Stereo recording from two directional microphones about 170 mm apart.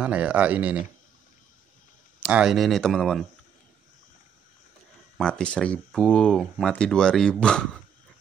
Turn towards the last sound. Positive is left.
turn(degrees=5)  # may be behind; listen again after turning